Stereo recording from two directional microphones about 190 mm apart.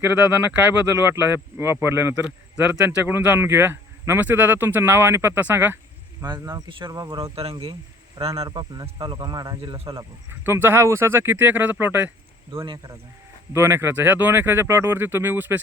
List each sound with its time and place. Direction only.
0.0 s speech: 10° right (ahead or behind); by 10.0 s 30° right (ahead or behind)
10.0 s speech: 15° right (ahead or behind)
12.6 s speech: 25° right (ahead or behind)
13.5 s speech: 15° right (ahead or behind)